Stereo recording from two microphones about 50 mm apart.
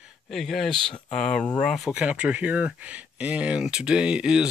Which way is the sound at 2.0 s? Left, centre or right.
Right.